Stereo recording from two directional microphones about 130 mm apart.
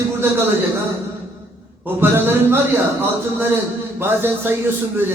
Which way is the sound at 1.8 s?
15° right (ahead or behind).